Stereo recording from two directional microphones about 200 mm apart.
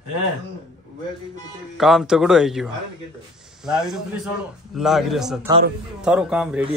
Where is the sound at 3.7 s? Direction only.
5° right (ahead or behind).